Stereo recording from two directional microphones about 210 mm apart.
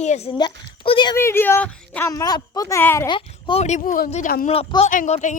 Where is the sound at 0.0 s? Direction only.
30° left (ahead or behind).